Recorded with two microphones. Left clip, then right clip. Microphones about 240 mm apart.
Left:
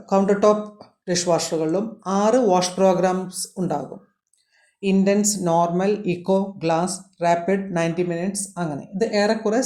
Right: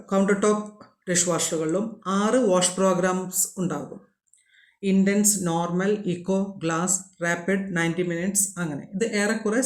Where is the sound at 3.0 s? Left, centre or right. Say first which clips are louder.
Left 3 dB; centre.